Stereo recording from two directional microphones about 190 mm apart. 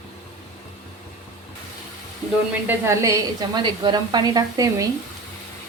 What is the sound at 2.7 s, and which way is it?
A woman's voice, 15° right (ahead or behind).